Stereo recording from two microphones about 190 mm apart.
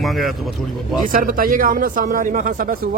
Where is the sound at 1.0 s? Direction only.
45° right (ahead or behind).